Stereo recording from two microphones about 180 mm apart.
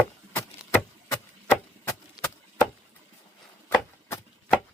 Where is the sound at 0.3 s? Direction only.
15° left (ahead or behind).